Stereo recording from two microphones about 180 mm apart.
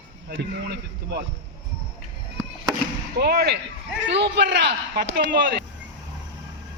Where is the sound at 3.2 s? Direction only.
60° right (ahead or behind).